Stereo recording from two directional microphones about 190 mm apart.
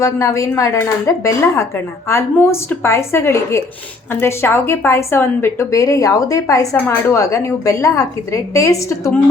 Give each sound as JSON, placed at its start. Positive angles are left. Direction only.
{"t": 0.0, "sound": "a woman's voice", "side_deg": 15}